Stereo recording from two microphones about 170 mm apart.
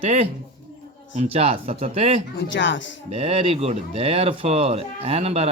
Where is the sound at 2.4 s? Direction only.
90° left.